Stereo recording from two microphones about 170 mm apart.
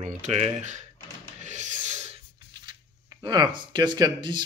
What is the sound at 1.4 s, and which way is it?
Music, 45° right (ahead or behind).